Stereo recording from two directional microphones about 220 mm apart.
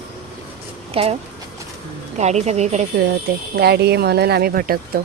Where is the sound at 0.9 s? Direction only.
25° right (ahead or behind).